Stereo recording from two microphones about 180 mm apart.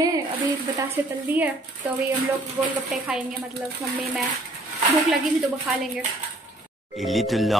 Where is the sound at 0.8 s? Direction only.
10° right (ahead or behind).